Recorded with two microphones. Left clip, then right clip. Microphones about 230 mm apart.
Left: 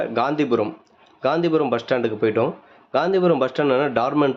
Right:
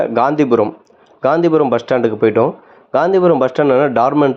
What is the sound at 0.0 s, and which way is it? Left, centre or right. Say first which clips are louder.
Speech: right 8 dB; centre.